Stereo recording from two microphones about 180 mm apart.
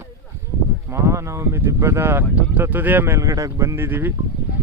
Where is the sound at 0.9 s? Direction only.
15° right (ahead or behind).